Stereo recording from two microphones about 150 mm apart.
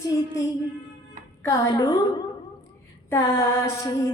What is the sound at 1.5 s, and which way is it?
A capella, 25° left (ahead or behind).